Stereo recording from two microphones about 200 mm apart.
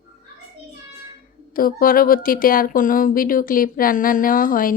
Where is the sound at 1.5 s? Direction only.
45° left (ahead or behind).